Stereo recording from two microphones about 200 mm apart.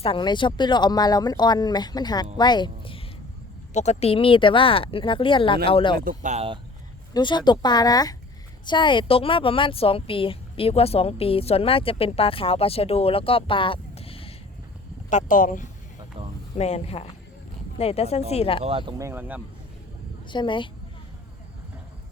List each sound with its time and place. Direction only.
0.0 s a woman's voice: 25° left (ahead or behind)
6.0 s speech: 40° right (ahead or behind)
7.1 s a woman's voice: 20° left (ahead or behind)
15.1 s a woman's voice: 40° left (ahead or behind)
18.6 s speech: 25° right (ahead or behind)
20.2 s speech: 25° left (ahead or behind)